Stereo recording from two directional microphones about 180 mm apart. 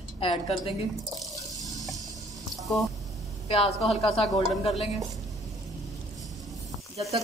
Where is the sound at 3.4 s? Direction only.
35° left (ahead or behind).